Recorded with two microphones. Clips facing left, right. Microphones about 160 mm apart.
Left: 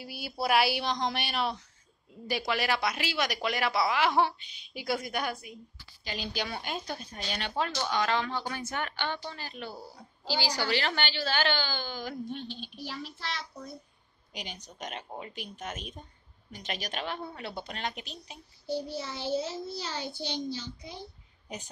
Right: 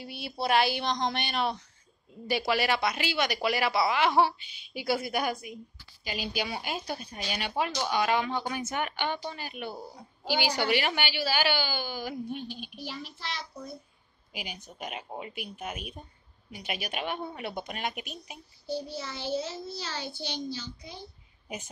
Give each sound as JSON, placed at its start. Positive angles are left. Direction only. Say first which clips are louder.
{"t": 0.0, "sound": "speech", "louder": "even", "side_deg": 5}
{"t": 14.3, "sound": "a woman's voice", "louder": "right 1 dB", "side_deg": -5}
{"t": 18.9, "sound": "a child's voice", "louder": "left 1 dB", "side_deg": 20}